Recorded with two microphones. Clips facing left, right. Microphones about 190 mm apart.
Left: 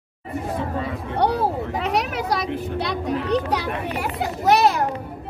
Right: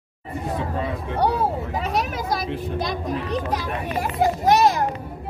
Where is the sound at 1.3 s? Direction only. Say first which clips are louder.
Left 1 dB; 70° left (ahead or behind).